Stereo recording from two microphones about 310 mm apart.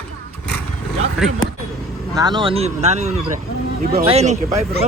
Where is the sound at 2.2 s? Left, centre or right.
Centre.